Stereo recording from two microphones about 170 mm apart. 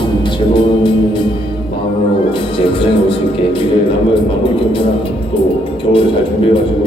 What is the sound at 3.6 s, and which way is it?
A man's voice, 30° left (ahead or behind).